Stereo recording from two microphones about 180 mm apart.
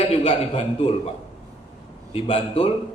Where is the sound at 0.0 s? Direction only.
35° left (ahead or behind).